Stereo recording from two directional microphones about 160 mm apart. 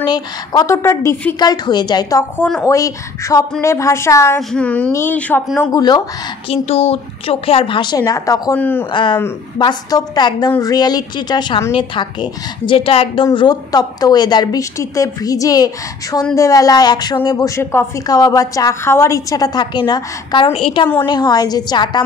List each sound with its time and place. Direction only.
0.0 s a woman's voice: 25° left (ahead or behind)
4.4 s speech: 5° left (ahead or behind)
5.7 s a woman's voice: 25° left (ahead or behind)
6.5 s speech: 40° left (ahead or behind); by 8.8 s 10° left (ahead or behind)
8.9 s a woman's voice: 30° left (ahead or behind)